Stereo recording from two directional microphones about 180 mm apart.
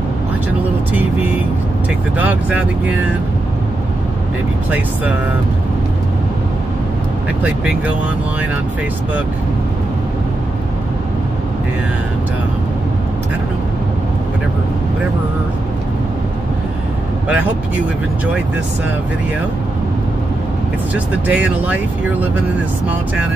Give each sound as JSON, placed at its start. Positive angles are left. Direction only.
{"t": 2.1, "sound": "speech", "side_deg": -10}
{"t": 20.9, "sound": "speech", "side_deg": -5}